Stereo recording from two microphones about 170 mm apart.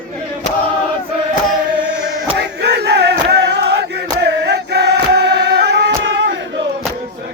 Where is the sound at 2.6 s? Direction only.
75° right (ahead or behind).